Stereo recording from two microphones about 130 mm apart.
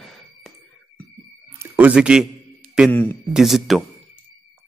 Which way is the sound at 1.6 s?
10° right (ahead or behind).